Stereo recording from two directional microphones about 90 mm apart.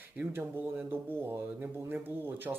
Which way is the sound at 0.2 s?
20° right (ahead or behind).